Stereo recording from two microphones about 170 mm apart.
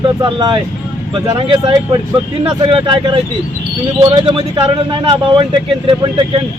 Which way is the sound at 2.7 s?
30° right (ahead or behind).